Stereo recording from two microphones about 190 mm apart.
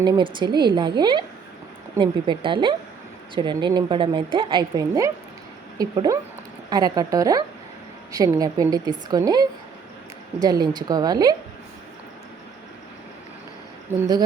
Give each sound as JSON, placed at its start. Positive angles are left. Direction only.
{"t": 0.0, "sound": "a woman's voice", "side_deg": -25}
{"t": 13.9, "sound": "speech", "side_deg": -10}